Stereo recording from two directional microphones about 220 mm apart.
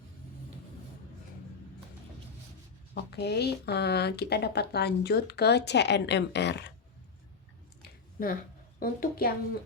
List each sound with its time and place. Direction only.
2.9 s speech: 50° left (ahead or behind)
7.8 s a sound: 40° left (ahead or behind)
8.8 s a woman's voice: 40° left (ahead or behind)